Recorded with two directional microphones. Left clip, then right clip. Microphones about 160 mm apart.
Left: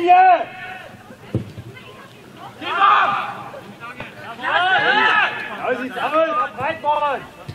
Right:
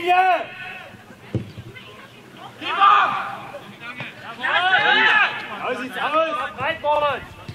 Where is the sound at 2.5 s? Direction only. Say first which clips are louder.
Even; 10° right (ahead or behind).